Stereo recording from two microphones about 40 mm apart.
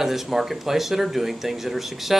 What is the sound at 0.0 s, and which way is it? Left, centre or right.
Speech, centre.